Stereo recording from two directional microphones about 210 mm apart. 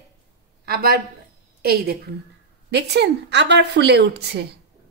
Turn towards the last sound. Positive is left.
turn(degrees=-50)  # may be behind; listen again after turning